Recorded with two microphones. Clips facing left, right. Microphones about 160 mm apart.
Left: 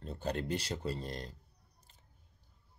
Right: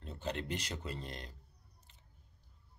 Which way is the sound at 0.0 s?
40° left (ahead or behind).